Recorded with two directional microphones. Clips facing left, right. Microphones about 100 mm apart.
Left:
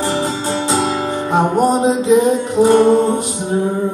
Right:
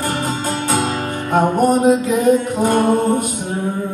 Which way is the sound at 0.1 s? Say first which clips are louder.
Left 2 dB; 50° right (ahead or behind).